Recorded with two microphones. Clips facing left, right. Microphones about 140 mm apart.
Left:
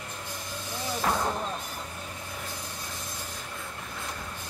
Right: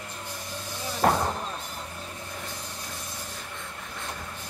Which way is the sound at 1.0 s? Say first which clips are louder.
Right 6 dB; 50° right (ahead or behind).